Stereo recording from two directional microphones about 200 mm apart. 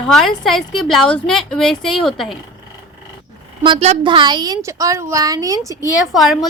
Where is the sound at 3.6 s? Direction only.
30° right (ahead or behind).